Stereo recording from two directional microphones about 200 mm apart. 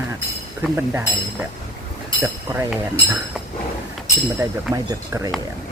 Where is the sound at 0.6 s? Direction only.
10° right (ahead or behind).